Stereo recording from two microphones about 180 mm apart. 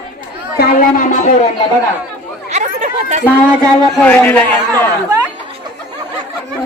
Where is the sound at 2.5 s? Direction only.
40° right (ahead or behind).